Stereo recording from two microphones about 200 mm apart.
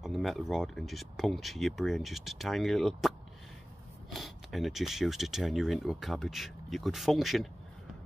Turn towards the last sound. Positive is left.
turn(degrees=0)  # may be behind; listen again after turning